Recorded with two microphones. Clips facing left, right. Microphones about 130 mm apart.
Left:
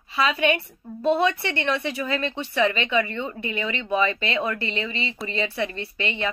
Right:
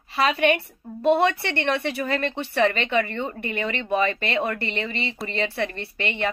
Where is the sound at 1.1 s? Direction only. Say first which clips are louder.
Right 2 dB; 60° right (ahead or behind).